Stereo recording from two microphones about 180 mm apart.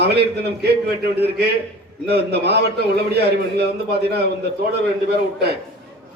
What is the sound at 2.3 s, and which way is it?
A man's voice, 65° right (ahead or behind).